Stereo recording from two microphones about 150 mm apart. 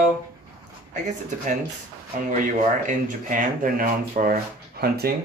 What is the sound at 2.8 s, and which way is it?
Speech, 65° right (ahead or behind).